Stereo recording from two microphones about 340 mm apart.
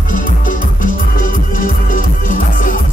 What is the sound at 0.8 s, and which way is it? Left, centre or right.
Music, left.